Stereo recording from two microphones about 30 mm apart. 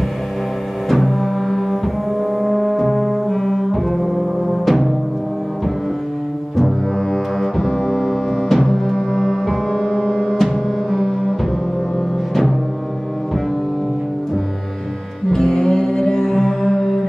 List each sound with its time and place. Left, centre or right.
0.8 s music: centre
7.1 s double bass: centre
15.3 s music: centre